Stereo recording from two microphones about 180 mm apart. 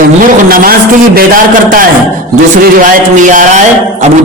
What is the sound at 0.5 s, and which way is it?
Speech, 55° right (ahead or behind).